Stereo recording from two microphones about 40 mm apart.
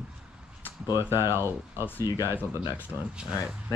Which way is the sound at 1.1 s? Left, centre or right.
Right.